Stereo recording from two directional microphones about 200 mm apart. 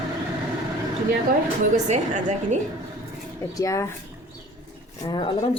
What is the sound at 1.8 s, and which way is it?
Speech, 35° right (ahead or behind).